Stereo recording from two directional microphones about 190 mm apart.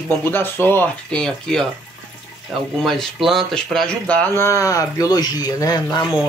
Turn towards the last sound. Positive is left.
turn(degrees=20)  # may be behind; listen again after turning